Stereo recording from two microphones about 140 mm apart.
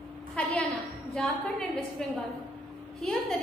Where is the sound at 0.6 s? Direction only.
5° left (ahead or behind).